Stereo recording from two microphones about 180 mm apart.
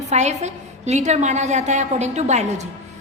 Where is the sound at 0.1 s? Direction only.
40° right (ahead or behind).